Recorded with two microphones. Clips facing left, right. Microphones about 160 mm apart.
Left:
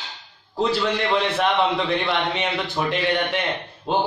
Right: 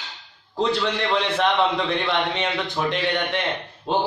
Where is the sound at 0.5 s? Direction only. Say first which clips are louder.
Left 1 dB; 5° left (ahead or behind).